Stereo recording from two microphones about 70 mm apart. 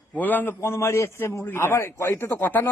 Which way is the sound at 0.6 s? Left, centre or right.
Left.